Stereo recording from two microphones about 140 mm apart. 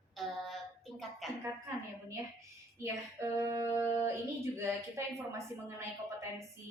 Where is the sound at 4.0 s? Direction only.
20° right (ahead or behind).